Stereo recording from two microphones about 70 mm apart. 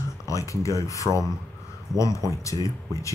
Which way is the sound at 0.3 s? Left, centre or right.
Left.